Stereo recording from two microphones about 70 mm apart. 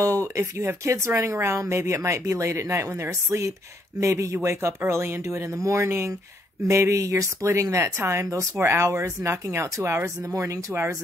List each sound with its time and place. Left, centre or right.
0.0 s speech: right